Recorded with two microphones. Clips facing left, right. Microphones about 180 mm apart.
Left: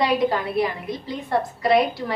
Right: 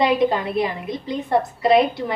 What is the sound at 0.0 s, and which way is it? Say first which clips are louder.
A woman's voice: right 2 dB; 20° right (ahead or behind).